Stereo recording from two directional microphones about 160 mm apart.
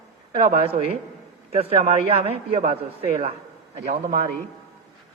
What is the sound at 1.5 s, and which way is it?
Speech, 40° right (ahead or behind).